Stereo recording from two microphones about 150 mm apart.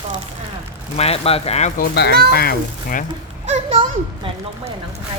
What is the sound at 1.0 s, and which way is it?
Speech, 40° left (ahead or behind).